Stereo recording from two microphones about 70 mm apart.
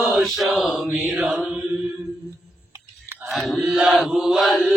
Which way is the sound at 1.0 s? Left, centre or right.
Right.